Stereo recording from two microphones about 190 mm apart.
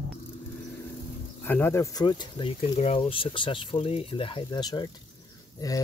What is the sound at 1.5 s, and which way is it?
Speech, 10° left (ahead or behind).